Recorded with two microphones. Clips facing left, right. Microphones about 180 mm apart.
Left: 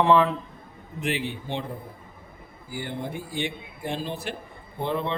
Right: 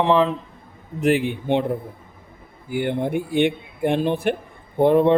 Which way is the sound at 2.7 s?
60° right (ahead or behind).